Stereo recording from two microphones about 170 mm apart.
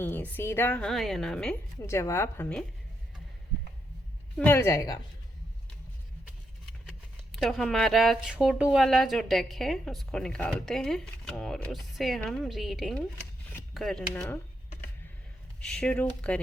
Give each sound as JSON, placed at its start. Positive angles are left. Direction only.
{"t": 0.0, "sound": "speech", "side_deg": 10}
{"t": 1.9, "sound": "a woman's voice", "side_deg": 15}
{"t": 4.4, "sound": "a woman's voice", "side_deg": 10}
{"t": 7.3, "sound": "speech", "side_deg": 0}
{"t": 15.6, "sound": "speech", "side_deg": 5}